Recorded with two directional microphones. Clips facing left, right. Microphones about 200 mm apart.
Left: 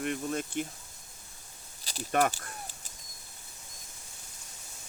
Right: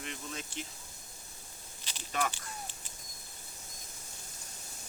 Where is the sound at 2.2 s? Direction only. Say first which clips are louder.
Left 6 dB; 40° left (ahead or behind).